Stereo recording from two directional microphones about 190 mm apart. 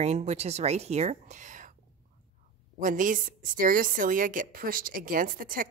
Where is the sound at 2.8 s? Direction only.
45° right (ahead or behind).